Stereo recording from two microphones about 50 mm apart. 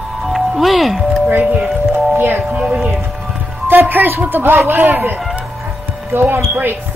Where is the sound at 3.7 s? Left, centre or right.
Right.